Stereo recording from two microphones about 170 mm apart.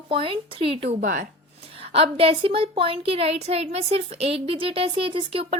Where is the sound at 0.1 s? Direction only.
30° right (ahead or behind).